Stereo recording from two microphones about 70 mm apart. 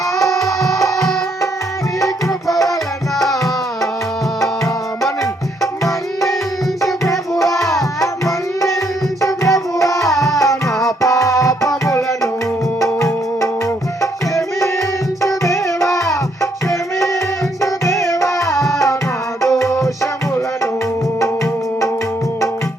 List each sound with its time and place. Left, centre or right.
0.2 s music: left
7.0 s music: left
7.6 s music: centre
8.0 s music: left
9.2 s tabla: left
10.2 s music: left
14.0 s tabla: left
17.6 s music: left